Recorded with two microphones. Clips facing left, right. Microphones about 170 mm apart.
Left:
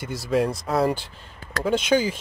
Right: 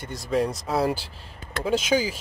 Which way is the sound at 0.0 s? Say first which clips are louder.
Left 2 dB; 5° left (ahead or behind).